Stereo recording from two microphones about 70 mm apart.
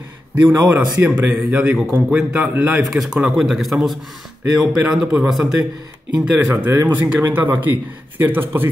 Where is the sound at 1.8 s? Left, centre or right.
Centre.